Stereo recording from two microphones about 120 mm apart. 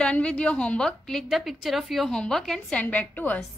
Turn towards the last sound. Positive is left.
turn(degrees=15)  # may be behind; listen again after turning